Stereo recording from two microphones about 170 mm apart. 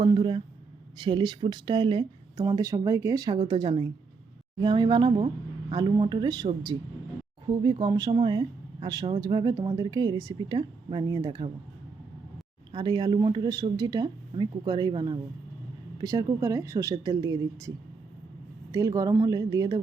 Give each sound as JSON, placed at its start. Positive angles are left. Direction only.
{"t": 0.0, "sound": "speech", "side_deg": -30}
{"t": 12.7, "sound": "speech", "side_deg": -25}
{"t": 18.7, "sound": "speech", "side_deg": -20}